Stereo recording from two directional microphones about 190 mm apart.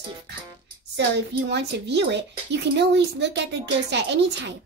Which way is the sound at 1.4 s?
65° right (ahead or behind).